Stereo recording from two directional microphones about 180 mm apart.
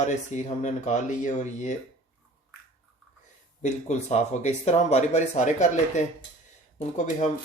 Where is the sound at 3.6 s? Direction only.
40° left (ahead or behind).